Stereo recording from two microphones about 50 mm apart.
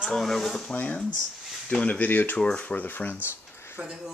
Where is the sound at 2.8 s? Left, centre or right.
Left.